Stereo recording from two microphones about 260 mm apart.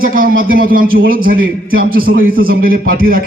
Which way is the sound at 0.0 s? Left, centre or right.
Right.